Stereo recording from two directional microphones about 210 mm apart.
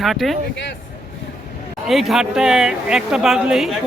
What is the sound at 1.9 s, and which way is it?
Speech, centre (ahead or behind).